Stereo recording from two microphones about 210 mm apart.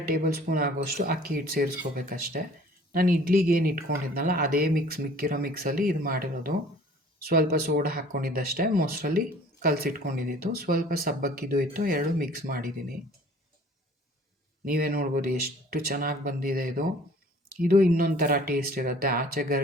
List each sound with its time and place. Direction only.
0.1 s speech: 40° right (ahead or behind)
14.6 s speech: 45° right (ahead or behind)